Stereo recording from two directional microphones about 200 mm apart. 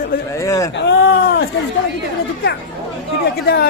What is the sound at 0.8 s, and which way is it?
Speech, 60° left (ahead or behind).